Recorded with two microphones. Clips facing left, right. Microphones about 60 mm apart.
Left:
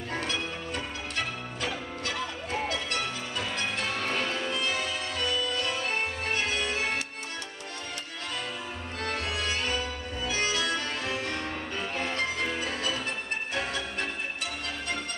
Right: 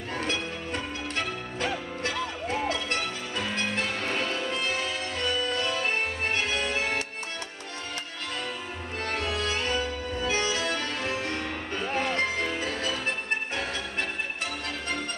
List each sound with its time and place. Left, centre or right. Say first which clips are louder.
1.6 s music: right 4 dB; right
9.0 s music: right 2 dB; right